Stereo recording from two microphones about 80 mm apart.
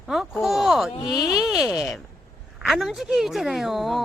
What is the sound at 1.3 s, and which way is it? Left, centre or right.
A woman's voice, centre.